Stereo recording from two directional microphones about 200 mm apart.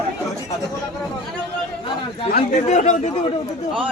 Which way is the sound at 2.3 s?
35° left (ahead or behind).